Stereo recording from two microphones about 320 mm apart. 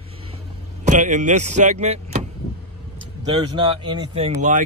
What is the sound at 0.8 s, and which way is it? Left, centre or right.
Speech, right.